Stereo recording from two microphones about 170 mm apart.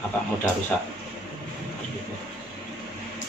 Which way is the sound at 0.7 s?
5° left (ahead or behind).